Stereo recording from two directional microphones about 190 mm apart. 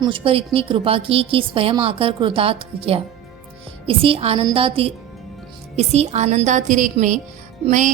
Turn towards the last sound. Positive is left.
turn(degrees=-40)  # may be behind; listen again after turning